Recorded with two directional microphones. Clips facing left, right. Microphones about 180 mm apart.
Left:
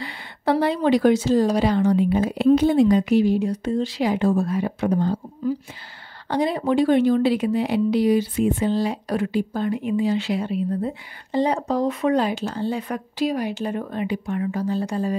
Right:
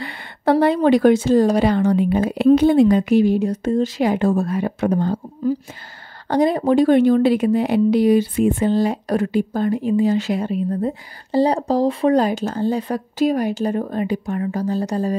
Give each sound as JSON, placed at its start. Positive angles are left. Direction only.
{"t": 0.0, "sound": "a woman's voice", "side_deg": -55}